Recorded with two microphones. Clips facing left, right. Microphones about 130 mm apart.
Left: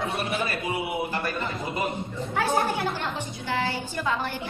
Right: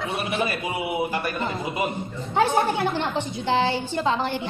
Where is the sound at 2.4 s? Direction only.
25° right (ahead or behind).